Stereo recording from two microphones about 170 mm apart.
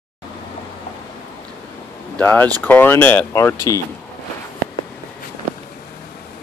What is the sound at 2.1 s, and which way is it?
Speech, 10° left (ahead or behind).